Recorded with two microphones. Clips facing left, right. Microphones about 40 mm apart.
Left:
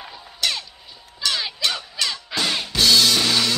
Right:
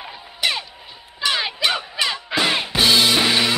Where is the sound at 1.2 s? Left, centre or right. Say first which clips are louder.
Right 3 dB; right.